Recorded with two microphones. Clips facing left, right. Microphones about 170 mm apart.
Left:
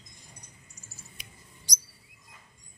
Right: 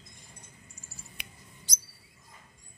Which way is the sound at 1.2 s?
65° right (ahead or behind).